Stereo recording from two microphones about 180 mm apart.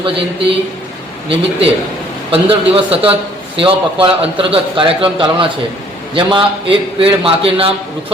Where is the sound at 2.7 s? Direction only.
30° right (ahead or behind).